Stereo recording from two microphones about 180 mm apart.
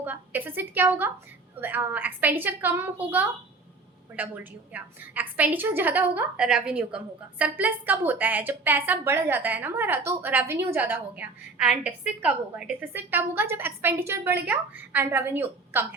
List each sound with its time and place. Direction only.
0.0 s a woman's voice: 10° right (ahead or behind)
4.7 s a woman's voice: 10° right (ahead or behind)